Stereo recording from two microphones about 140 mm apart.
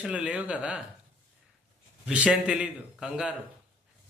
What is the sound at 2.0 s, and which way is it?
A man's voice, 10° right (ahead or behind).